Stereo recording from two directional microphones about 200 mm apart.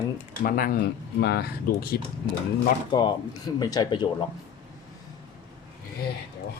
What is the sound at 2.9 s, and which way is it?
Speech, 20° left (ahead or behind).